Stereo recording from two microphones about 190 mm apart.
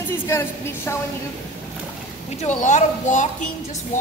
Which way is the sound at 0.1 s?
15° left (ahead or behind).